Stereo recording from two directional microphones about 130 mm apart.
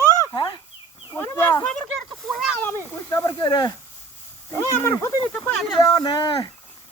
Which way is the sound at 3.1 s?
30° left (ahead or behind).